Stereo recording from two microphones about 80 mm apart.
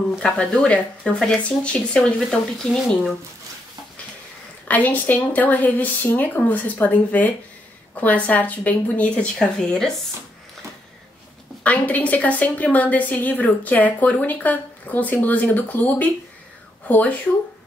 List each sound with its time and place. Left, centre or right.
0.2 s speech: centre
4.6 s a woman's voice: left
11.6 s a woman's voice: centre